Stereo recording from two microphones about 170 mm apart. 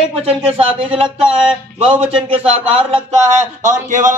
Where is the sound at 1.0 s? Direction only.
5° right (ahead or behind).